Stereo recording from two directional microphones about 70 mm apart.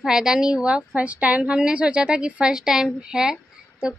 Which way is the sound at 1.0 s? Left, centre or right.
Centre.